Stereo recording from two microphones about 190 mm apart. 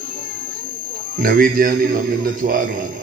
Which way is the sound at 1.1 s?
50° right (ahead or behind).